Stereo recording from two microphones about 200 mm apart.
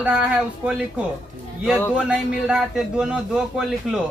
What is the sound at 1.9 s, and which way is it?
A man's voice, 5° right (ahead or behind).